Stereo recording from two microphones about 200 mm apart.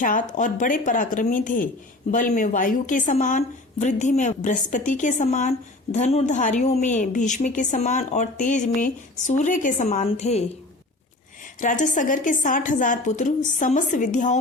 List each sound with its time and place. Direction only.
0.0 s speech: 40° left (ahead or behind)
11.6 s speech: 40° left (ahead or behind)